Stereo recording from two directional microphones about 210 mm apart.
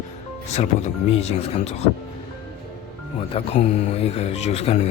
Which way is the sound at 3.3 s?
30° left (ahead or behind).